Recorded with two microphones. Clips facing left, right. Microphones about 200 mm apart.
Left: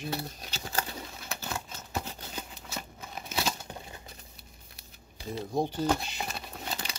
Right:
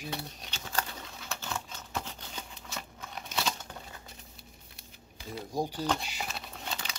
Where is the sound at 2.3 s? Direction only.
5° left (ahead or behind).